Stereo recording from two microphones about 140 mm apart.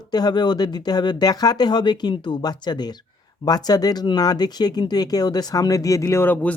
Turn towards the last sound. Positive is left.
turn(degrees=10)  # may be behind; listen again after turning